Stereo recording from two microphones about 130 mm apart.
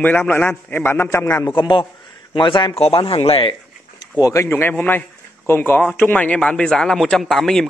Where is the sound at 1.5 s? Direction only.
35° left (ahead or behind).